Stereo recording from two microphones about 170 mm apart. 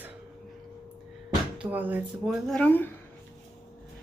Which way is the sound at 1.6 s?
10° right (ahead or behind).